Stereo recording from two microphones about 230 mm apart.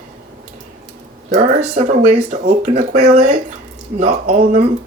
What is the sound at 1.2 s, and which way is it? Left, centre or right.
Speech, right.